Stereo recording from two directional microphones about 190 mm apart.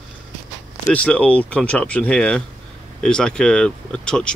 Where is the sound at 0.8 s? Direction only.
5° left (ahead or behind).